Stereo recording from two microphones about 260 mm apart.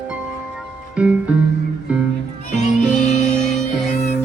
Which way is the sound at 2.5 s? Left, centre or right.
Left.